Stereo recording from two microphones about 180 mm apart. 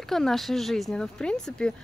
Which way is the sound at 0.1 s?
Centre (ahead or behind).